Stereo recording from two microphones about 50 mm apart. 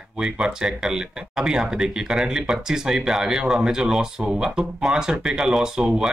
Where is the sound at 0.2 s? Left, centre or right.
Centre.